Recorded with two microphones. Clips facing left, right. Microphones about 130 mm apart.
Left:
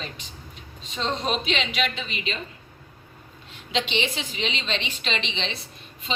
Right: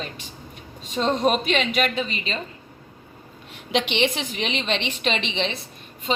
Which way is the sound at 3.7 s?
60° right (ahead or behind).